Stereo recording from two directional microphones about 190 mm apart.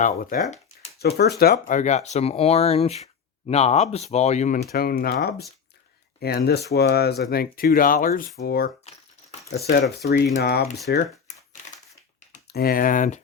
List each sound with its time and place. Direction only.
0.0 s speech: 45° left (ahead or behind)
0.9 s speech: 55° left (ahead or behind)
1.5 s speech: 40° left (ahead or behind)
4.6 s speech: 50° left (ahead or behind)
6.1 s speech: 55° left (ahead or behind)
11.6 s crushing: 40° left (ahead or behind)
12.5 s speech: 55° left (ahead or behind)